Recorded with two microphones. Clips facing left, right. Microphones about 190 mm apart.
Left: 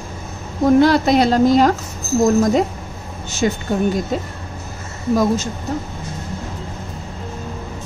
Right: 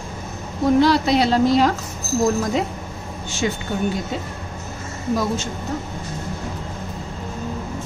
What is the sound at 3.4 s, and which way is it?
Speech, 45° left (ahead or behind).